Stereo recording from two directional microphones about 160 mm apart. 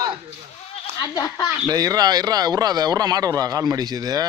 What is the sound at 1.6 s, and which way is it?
Speech, 25° right (ahead or behind).